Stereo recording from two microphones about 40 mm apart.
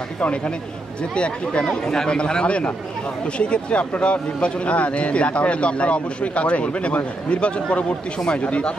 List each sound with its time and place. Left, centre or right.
1.1 s a man's voice: left
1.7 s a man's voice: centre; by 8.7 s left